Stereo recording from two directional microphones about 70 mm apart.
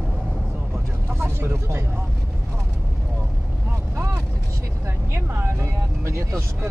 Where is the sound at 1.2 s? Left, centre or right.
Right.